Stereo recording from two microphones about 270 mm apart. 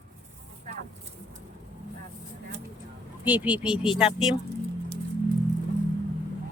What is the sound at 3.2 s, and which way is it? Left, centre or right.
Speech, centre.